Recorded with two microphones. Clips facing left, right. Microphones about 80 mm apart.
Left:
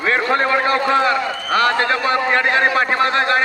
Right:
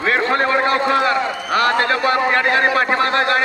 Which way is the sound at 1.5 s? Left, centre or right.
Left.